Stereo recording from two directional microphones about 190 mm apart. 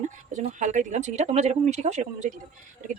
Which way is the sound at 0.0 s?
40° right (ahead or behind).